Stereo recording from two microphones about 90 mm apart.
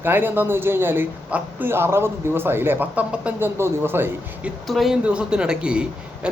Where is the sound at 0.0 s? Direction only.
20° right (ahead or behind).